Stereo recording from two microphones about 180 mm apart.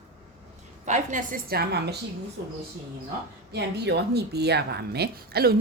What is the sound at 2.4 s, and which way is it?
Speech, 75° right (ahead or behind).